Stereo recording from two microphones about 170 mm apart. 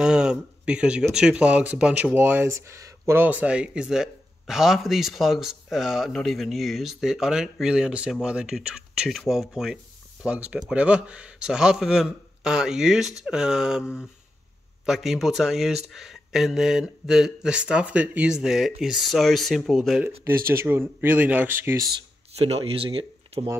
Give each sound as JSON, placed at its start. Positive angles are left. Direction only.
{"t": 0.0, "sound": "speech", "side_deg": -5}
{"t": 20.2, "sound": "speech", "side_deg": -15}
{"t": 22.3, "sound": "speech", "side_deg": -35}